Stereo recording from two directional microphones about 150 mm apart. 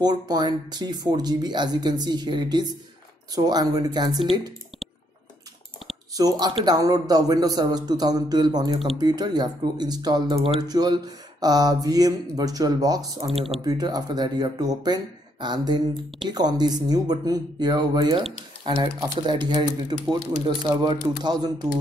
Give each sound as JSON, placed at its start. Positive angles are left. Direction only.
{"t": 0.0, "sound": "speech", "side_deg": -25}
{"t": 4.2, "sound": "speech", "side_deg": 0}
{"t": 6.1, "sound": "speech", "side_deg": -25}
{"t": 13.3, "sound": "speech", "side_deg": 0}
{"t": 13.6, "sound": "speech", "side_deg": -25}